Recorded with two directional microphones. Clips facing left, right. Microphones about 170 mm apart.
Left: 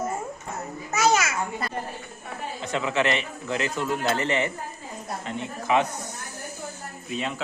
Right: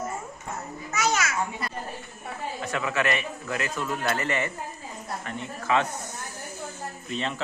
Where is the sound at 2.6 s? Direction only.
25° left (ahead or behind).